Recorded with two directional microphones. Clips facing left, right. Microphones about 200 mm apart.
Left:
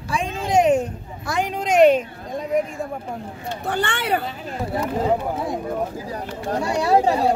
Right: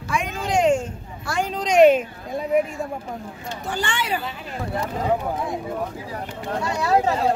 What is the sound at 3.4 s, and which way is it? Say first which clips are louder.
Speech: left 3 dB; 60° left (ahead or behind).